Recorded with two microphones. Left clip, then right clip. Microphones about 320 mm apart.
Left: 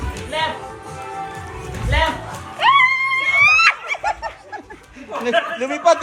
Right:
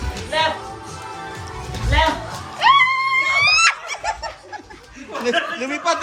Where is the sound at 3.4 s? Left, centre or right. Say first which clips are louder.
Left 2 dB; centre.